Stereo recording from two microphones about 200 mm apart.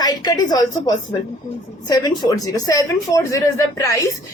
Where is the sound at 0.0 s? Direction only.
20° left (ahead or behind).